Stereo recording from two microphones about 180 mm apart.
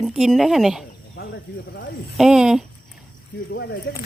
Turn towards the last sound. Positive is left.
turn(degrees=65)  # may be behind; listen again after turning